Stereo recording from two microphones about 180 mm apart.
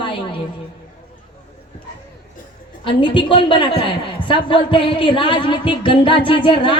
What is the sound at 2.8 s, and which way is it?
A woman's voice, 30° left (ahead or behind).